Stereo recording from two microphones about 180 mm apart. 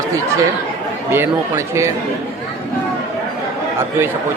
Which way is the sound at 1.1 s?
15° right (ahead or behind).